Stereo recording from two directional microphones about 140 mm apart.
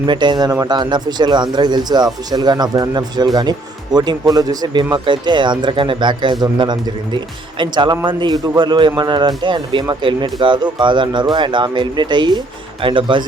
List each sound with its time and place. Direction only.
0.0 s speech: 35° right (ahead or behind)